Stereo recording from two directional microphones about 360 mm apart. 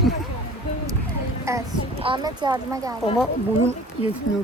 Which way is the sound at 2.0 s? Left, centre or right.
Centre.